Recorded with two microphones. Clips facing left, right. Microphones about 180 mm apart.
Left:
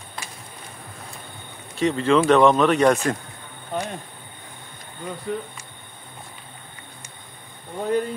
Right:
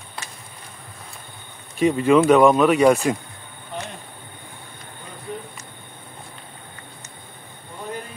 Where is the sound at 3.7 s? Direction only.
45° left (ahead or behind).